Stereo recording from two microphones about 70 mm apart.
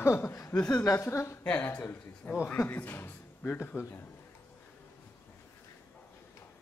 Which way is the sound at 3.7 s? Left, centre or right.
Centre.